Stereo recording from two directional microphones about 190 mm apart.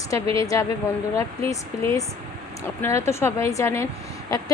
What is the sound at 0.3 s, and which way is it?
A woman's voice, 15° left (ahead or behind).